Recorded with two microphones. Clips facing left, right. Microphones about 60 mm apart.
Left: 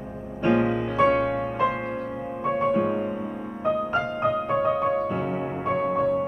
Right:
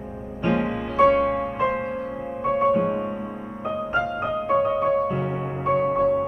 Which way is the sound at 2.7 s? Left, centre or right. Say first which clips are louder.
Right 1 dB; centre.